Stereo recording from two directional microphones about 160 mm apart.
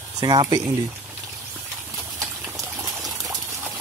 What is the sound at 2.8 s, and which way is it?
Water, 20° right (ahead or behind).